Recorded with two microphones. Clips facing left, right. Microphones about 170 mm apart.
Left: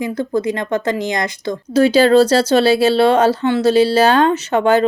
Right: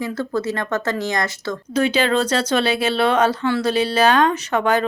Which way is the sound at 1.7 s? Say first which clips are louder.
Left 8 dB; 35° left (ahead or behind).